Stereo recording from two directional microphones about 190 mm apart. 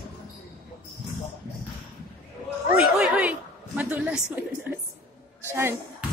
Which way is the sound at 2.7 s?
5° right (ahead or behind).